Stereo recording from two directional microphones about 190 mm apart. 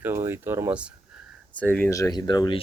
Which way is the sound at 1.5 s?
10° left (ahead or behind).